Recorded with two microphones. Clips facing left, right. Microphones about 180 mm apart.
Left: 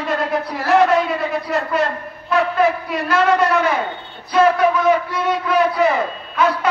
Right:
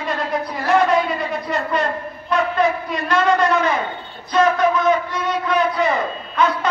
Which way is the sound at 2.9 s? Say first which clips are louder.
Left 1 dB; 5° left (ahead or behind).